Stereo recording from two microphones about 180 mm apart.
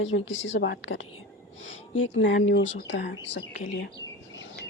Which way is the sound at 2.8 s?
75° left (ahead or behind).